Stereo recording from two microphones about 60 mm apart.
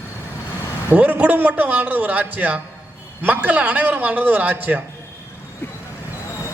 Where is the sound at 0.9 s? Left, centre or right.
Right.